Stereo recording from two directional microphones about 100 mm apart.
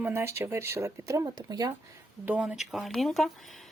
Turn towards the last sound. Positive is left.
turn(degrees=0)  # may be behind; listen again after turning